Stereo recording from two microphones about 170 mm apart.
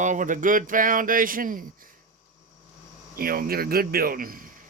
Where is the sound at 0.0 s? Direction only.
50° right (ahead or behind).